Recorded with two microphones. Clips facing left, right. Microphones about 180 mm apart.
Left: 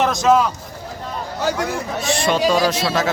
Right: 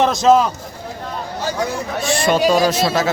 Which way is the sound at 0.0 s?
25° right (ahead or behind).